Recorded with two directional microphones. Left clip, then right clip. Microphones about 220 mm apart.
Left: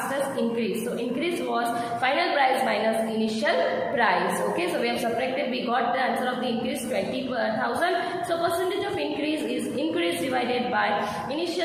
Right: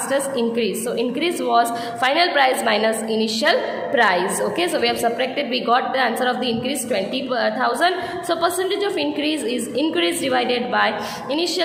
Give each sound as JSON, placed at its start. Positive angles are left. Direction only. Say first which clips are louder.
{"t": 1.2, "sound": "a woman's voice", "louder": "right 9 dB", "side_deg": -50}
{"t": 5.7, "sound": "a woman's voice", "louder": "right 6 dB", "side_deg": -50}
{"t": 7.4, "sound": "a woman's voice", "louder": "right 6 dB", "side_deg": -50}
{"t": 10.0, "sound": "a woman's voice", "louder": "right 6 dB", "side_deg": -50}